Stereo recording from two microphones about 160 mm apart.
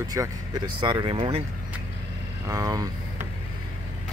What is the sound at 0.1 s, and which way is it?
Speech, 25° right (ahead or behind).